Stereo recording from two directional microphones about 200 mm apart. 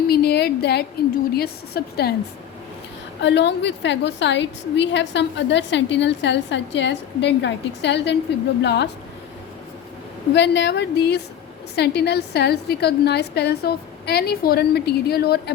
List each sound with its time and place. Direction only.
0.1 s a sound: 55° left (ahead or behind)
1.4 s a woman's voice: 50° left (ahead or behind)
3.2 s a woman's voice: 60° left (ahead or behind)
10.3 s a woman's voice: 60° left (ahead or behind)